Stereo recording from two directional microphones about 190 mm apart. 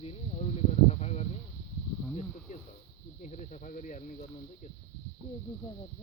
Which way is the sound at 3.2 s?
40° left (ahead or behind).